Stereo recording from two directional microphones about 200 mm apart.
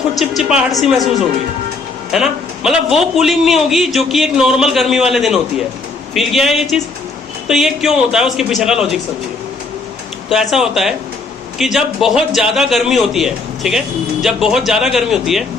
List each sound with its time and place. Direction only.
0.2 s a man's voice: 5° right (ahead or behind)
2.1 s a man's voice: centre (ahead or behind)
10.2 s a man's voice: centre (ahead or behind)